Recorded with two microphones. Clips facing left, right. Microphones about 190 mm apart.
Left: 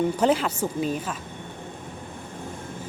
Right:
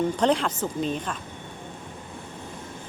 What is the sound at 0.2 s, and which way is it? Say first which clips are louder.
Speech: left 1 dB; 5° left (ahead or behind).